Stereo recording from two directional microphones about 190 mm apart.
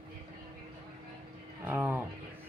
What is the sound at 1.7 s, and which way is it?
Speech, 10° right (ahead or behind).